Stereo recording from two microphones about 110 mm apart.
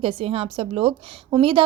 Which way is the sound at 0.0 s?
55° right (ahead or behind).